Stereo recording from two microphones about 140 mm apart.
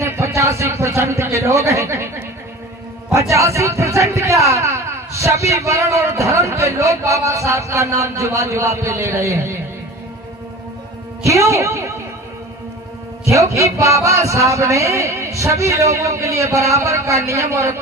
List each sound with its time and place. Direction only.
0.0 s a man's voice: 20° right (ahead or behind)
11.2 s speech: 20° right (ahead or behind)
13.2 s a man's voice: 20° right (ahead or behind)